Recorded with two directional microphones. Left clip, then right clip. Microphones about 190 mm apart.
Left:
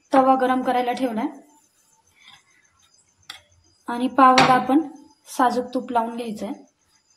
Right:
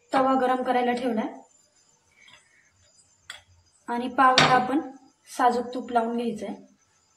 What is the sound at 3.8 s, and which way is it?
Speech, 40° left (ahead or behind).